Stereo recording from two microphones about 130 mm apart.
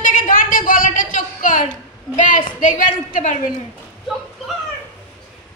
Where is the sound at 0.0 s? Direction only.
90° left.